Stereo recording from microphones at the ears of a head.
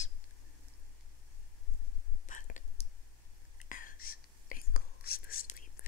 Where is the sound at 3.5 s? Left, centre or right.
Left.